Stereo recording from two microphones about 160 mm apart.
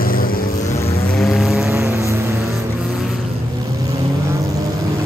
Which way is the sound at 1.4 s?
5° right (ahead or behind).